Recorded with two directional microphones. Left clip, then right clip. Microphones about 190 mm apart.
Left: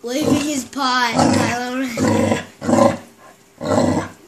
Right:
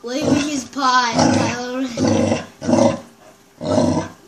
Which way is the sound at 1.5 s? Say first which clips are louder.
Left 2 dB; 40° left (ahead or behind).